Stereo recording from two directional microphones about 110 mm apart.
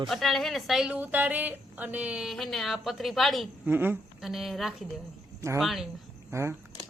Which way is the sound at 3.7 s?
20° right (ahead or behind).